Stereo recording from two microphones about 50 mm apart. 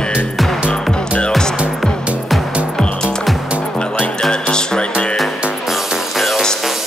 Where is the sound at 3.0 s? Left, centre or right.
Centre.